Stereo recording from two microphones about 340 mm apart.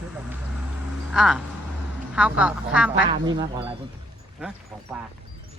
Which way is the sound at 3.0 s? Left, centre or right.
Centre.